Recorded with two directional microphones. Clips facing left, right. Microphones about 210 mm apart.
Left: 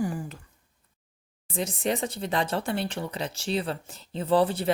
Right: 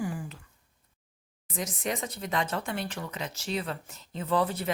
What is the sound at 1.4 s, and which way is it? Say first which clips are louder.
Speech: left 5 dB; 30° left (ahead or behind).